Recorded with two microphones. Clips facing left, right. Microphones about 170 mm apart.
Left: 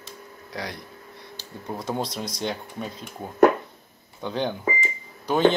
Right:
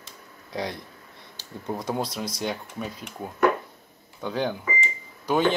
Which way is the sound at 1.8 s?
10° right (ahead or behind).